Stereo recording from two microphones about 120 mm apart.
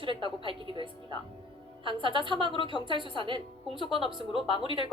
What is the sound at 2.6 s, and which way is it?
Speech, 40° left (ahead or behind).